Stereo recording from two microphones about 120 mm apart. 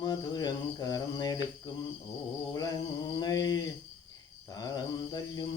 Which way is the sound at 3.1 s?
35° left (ahead or behind).